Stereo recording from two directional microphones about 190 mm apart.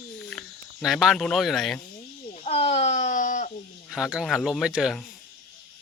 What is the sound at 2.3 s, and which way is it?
Speech, 30° left (ahead or behind).